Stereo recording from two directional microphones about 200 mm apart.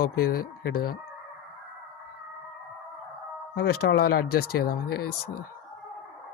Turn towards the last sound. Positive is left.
turn(degrees=50)  # may be behind; listen again after turning